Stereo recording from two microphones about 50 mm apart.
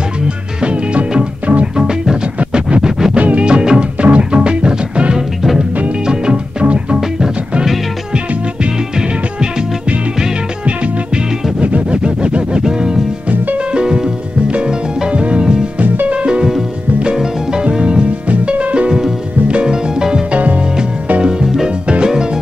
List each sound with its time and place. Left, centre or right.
0.6 s music: centre
11.6 s music: right
15.8 s music: right; by 20.2 s centre
20.3 s music: right
21.2 s music: centre